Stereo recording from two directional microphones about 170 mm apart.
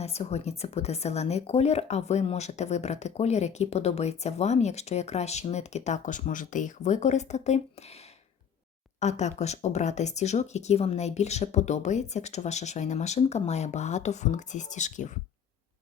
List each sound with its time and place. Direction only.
0.0 s speech: 40° left (ahead or behind)
9.0 s speech: 40° left (ahead or behind)